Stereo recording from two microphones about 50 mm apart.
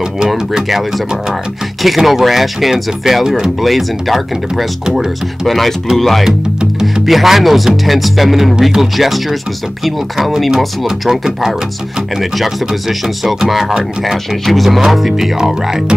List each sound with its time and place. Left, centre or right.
0.3 s speech: centre
13.5 s speech: centre